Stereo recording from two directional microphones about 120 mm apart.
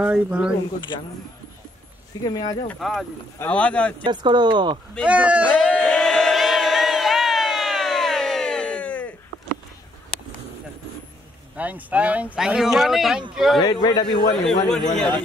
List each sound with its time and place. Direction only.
0.0 s speech: 10° right (ahead or behind)
2.2 s a man's voice: 35° left (ahead or behind)
2.8 s a man's voice: centre (ahead or behind)
4.0 s speech: 40° right (ahead or behind)
5.0 s speech: 10° right (ahead or behind)
5.8 s crowd: 10° left (ahead or behind)
11.5 s a man's voice: 10° right (ahead or behind)
13.6 s a man's voice: 35° left (ahead or behind)
14.3 s a man's voice: 5° left (ahead or behind)